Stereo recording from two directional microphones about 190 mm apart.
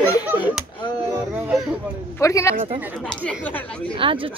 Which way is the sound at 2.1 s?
15° left (ahead or behind).